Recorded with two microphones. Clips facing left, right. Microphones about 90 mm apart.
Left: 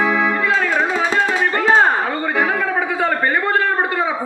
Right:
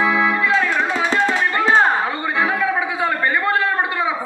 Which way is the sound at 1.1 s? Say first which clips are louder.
Right 1 dB; 40° left (ahead or behind).